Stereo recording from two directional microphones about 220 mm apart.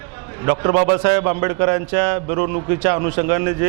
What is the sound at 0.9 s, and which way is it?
A man's voice, 20° right (ahead or behind).